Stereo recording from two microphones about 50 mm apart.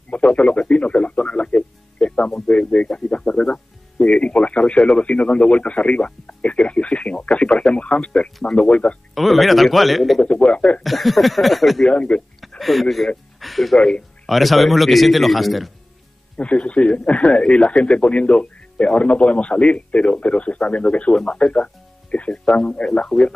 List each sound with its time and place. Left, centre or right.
0.1 s speech: left
9.1 s a man's voice: centre
10.2 s speech: left
10.8 s a man's voice: centre
11.9 s speech: left
12.4 s speech: centre
13.4 s music: centre
13.7 s speech: centre
14.2 s a man's voice: centre
16.3 s speech: left